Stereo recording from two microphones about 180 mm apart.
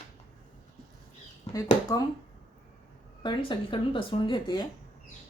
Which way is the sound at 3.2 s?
25° left (ahead or behind).